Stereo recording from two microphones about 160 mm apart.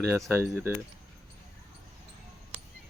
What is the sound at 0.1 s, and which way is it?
Speech, 15° right (ahead or behind).